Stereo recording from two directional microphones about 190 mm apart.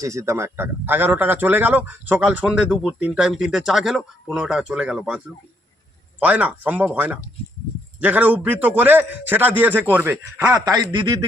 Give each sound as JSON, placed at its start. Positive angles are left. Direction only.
{"t": 0.0, "sound": "speech", "side_deg": -15}
{"t": 10.9, "sound": "a man's voice", "side_deg": -25}